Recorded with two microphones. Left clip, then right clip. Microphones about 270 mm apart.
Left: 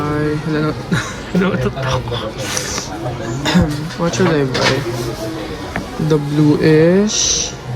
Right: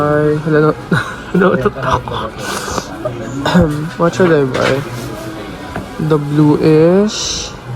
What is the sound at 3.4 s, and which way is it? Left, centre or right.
Speech, centre.